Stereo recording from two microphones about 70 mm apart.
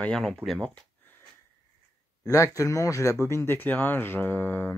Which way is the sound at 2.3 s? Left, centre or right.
Left.